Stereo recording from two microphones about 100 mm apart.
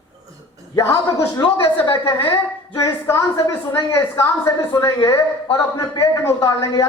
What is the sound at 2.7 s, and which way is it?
A woman's voice, 30° left (ahead or behind).